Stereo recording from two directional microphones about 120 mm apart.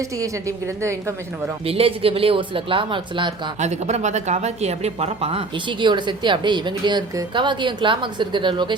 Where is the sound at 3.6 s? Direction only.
70° right (ahead or behind).